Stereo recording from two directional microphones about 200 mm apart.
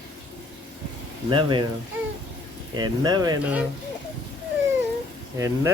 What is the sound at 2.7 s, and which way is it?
Speech, 20° right (ahead or behind).